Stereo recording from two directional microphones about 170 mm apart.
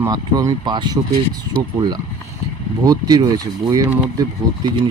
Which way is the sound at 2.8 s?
20° right (ahead or behind).